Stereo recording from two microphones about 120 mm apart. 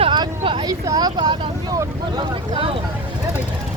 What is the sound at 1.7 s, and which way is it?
Speech, 35° right (ahead or behind).